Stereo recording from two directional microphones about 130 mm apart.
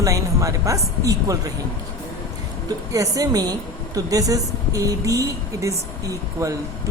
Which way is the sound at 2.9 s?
25° right (ahead or behind).